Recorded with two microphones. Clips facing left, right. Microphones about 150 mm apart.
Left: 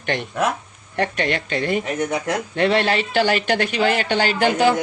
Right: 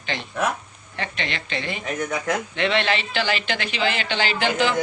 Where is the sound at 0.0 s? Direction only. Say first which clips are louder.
Left 4 dB; 55° left (ahead or behind).